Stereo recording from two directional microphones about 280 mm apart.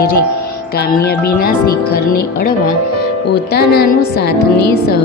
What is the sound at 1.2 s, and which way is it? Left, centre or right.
Speech, left.